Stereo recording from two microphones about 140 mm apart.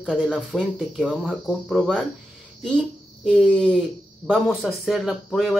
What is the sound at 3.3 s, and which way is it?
Speech, 5° left (ahead or behind).